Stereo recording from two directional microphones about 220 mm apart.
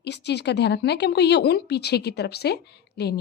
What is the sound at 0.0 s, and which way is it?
A woman's voice, 50° left (ahead or behind).